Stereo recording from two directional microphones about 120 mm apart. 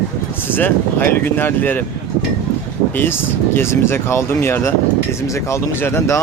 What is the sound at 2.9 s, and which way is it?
Speech, 20° left (ahead or behind).